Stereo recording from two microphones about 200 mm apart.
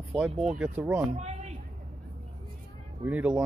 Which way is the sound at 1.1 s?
35° right (ahead or behind).